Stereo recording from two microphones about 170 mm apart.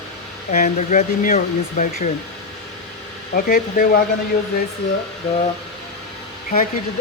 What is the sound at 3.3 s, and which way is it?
Speech, 60° left (ahead or behind).